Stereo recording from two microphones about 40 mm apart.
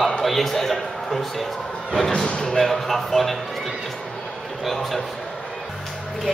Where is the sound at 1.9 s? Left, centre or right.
Centre.